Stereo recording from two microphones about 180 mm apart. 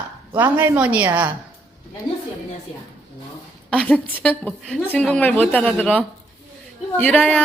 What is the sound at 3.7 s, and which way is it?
A woman's voice, 10° left (ahead or behind).